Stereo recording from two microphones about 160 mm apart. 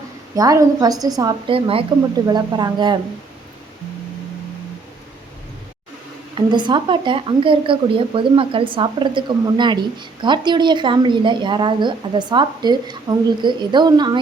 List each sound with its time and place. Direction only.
0.3 s speech: 20° right (ahead or behind)
1.5 s speech: 35° right (ahead or behind)
6.3 s speech: 30° right (ahead or behind)